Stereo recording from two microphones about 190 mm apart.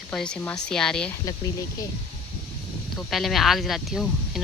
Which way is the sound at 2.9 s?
Centre (ahead or behind).